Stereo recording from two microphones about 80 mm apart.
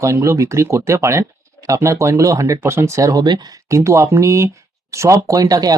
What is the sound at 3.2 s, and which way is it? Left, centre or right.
Speech, right.